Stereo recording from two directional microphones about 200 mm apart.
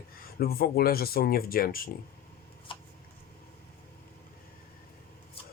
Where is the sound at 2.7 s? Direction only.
25° left (ahead or behind).